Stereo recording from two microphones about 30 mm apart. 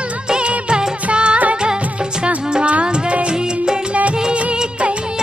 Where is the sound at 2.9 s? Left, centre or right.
Right.